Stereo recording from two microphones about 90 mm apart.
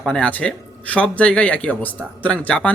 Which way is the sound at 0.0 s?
10° left (ahead or behind).